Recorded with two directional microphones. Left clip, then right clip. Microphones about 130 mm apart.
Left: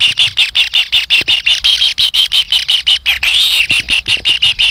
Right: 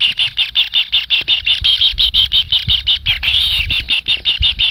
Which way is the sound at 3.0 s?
35° left (ahead or behind).